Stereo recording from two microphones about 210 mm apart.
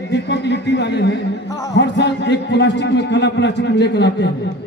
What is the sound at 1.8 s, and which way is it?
A man's voice, 55° left (ahead or behind).